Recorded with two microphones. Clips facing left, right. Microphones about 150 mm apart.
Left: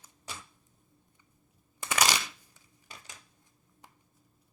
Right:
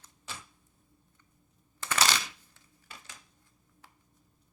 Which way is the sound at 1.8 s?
15° left (ahead or behind).